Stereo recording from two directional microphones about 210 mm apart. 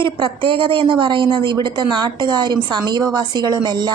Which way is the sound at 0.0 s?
25° right (ahead or behind).